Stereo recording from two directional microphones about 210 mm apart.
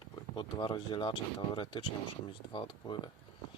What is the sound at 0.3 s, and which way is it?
Speech, 20° left (ahead or behind).